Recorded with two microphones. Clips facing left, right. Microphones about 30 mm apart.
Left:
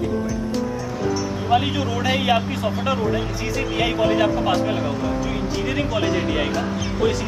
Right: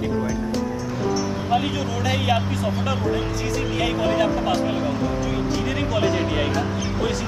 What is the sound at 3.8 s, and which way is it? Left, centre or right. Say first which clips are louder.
Speech: left 3 dB; centre.